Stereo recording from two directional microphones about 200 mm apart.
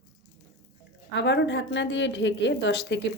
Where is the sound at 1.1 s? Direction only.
60° left (ahead or behind).